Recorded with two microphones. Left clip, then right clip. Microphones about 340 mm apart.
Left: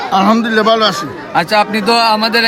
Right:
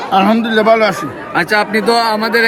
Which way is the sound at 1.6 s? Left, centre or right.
Left.